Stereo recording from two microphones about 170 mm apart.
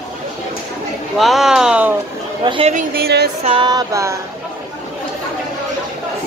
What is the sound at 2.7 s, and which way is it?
Speech, 65° right (ahead or behind).